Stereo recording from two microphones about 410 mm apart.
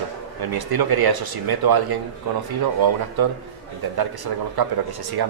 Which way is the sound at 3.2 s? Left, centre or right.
Right.